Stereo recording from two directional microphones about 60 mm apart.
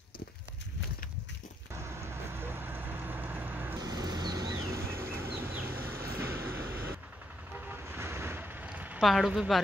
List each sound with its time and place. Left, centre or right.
1.7 s vehicle: right
3.7 s vehicle: right
4.6 s a sound: right
5.4 s vehicle: right
7.5 s vehicle: right
8.7 s a sound: right
9.0 s speech: centre